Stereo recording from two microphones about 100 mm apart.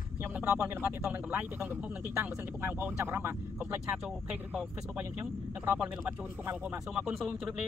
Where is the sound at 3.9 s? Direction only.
5° right (ahead or behind).